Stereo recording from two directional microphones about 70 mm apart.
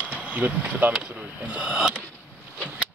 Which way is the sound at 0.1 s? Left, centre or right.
Right.